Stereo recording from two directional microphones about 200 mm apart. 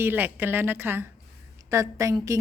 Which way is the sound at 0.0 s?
10° right (ahead or behind).